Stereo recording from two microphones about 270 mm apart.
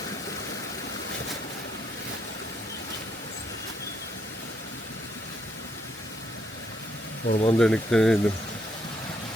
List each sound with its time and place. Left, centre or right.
7.3 s speech: left
7.6 s speech: centre